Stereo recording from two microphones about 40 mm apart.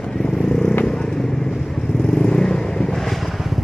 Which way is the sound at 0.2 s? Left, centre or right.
Centre.